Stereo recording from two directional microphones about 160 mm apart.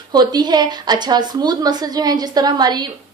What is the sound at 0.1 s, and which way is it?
A woman's voice, 25° right (ahead or behind).